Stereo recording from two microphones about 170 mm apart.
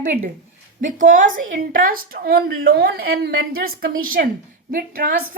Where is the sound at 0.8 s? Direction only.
50° right (ahead or behind).